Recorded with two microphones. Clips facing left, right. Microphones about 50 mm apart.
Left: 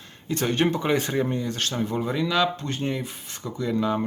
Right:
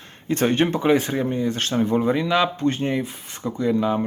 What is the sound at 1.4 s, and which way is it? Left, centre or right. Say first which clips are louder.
Speech: right 5 dB; right.